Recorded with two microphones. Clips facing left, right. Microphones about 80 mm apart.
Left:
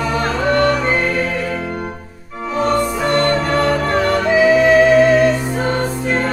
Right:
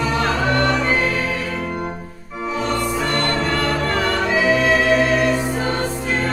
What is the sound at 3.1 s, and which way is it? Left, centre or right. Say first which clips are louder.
Music: left 5 dB; left.